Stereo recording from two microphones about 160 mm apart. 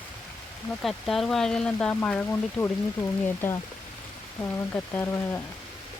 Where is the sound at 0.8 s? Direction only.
Centre (ahead or behind).